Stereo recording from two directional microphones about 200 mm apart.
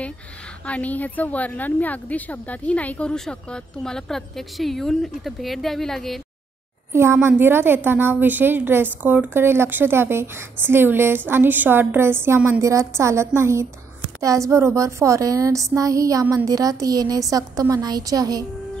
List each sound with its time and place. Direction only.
0.7 s a woman's voice: 5° left (ahead or behind)
6.9 s a woman's voice: 15° right (ahead or behind)